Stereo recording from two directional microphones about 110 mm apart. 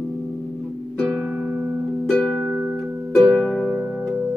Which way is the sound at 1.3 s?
10° right (ahead or behind).